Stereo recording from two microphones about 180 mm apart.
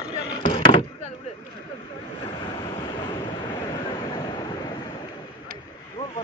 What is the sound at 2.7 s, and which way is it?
Waves, 25° left (ahead or behind).